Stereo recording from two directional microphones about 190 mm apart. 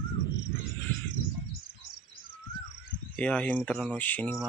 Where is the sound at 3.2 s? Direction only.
5° left (ahead or behind).